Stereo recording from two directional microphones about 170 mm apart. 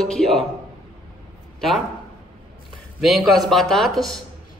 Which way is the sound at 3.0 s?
Centre (ahead or behind).